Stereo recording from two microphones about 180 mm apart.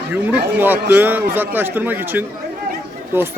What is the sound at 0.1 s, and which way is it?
A man's voice, 10° right (ahead or behind).